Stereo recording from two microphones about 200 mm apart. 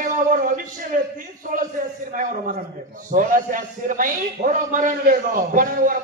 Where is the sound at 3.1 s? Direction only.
40° right (ahead or behind).